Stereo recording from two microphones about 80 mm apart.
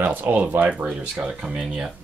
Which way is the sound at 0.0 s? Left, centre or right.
Centre.